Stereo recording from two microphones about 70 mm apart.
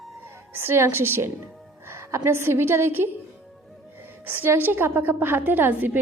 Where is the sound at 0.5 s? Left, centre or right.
Right.